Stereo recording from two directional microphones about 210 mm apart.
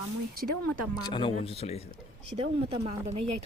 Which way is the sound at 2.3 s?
30° right (ahead or behind).